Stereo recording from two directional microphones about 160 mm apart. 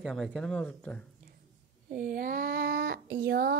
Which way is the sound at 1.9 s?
65° right (ahead or behind).